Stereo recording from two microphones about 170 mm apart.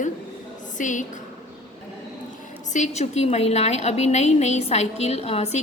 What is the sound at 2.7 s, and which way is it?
A woman's voice, 45° left (ahead or behind).